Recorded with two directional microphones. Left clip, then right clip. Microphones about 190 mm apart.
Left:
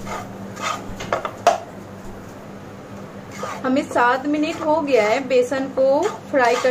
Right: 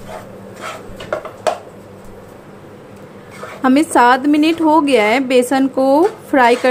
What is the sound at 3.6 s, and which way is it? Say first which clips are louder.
A woman's voice: right 7 dB; 55° right (ahead or behind).